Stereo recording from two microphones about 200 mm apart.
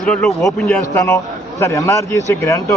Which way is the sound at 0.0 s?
Centre (ahead or behind).